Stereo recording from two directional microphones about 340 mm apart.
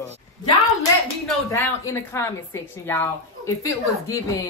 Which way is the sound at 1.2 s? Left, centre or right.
Centre.